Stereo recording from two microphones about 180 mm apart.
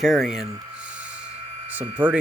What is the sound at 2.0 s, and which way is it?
Speech, 10° right (ahead or behind).